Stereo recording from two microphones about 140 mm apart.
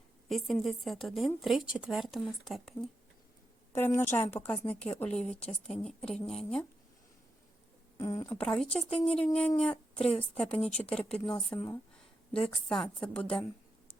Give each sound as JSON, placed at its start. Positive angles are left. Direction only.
{"t": 0.3, "sound": "speech", "side_deg": 0}
{"t": 3.7, "sound": "a woman's voice", "side_deg": 15}
{"t": 7.9, "sound": "speech", "side_deg": 20}
{"t": 8.3, "sound": "a woman's voice", "side_deg": 5}
{"t": 8.6, "sound": "speech", "side_deg": 45}
{"t": 9.2, "sound": "a woman's voice", "side_deg": 10}